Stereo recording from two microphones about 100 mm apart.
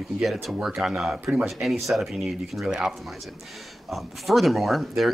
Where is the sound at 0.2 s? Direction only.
Centre (ahead or behind).